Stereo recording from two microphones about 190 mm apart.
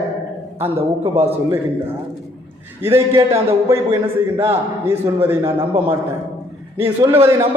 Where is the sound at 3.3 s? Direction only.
15° right (ahead or behind).